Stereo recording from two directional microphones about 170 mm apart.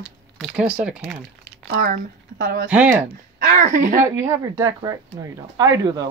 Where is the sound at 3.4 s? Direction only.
50° right (ahead or behind).